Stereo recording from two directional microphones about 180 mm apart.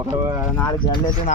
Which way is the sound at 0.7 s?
25° left (ahead or behind).